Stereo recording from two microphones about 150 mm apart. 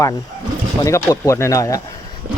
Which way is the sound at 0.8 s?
20° left (ahead or behind).